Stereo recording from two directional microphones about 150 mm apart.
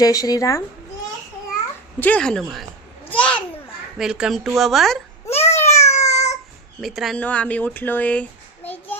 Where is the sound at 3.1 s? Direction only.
10° left (ahead or behind).